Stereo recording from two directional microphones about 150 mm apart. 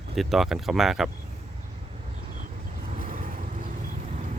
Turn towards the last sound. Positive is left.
turn(degrees=-60)  # may be behind; listen again after turning